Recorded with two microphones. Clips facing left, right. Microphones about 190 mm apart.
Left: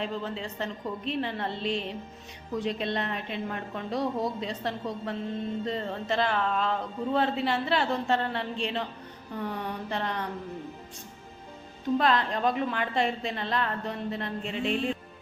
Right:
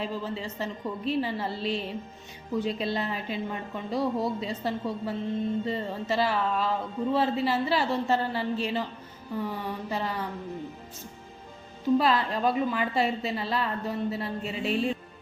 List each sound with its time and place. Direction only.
0.0 s speech: centre (ahead or behind)
11.9 s speech: 5° right (ahead or behind)